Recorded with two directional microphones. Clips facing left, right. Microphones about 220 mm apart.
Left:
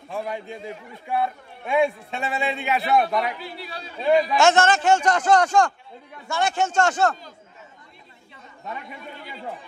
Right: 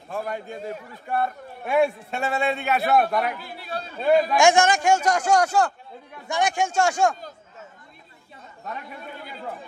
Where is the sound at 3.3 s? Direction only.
50° right (ahead or behind).